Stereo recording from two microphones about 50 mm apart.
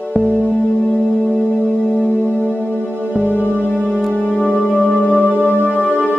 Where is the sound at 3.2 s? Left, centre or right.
Left.